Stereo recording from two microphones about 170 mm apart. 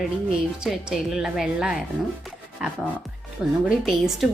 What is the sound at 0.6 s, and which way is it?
A woman's voice, 5° right (ahead or behind).